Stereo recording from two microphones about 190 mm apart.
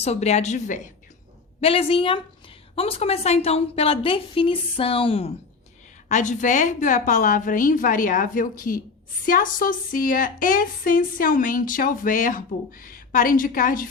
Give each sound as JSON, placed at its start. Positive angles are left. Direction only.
{"t": 0.0, "sound": "a woman's voice", "side_deg": 35}
{"t": 6.1, "sound": "speech", "side_deg": 40}